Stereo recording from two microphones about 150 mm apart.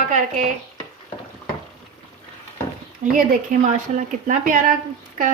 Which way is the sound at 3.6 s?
55° right (ahead or behind).